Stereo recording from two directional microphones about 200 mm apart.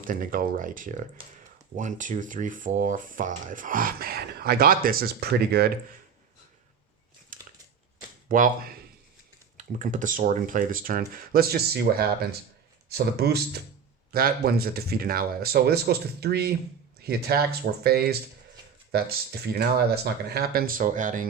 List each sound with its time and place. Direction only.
0.0 s speech: 45° right (ahead or behind)
7.3 s a sound: 40° right (ahead or behind)
8.3 s speech: 45° right (ahead or behind)